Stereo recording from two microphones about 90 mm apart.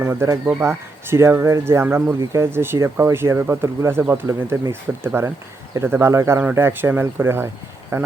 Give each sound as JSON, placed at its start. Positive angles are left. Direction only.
{"t": 0.0, "sound": "speech", "side_deg": -30}